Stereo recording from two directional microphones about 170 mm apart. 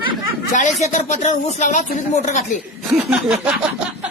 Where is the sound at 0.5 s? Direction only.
45° left (ahead or behind).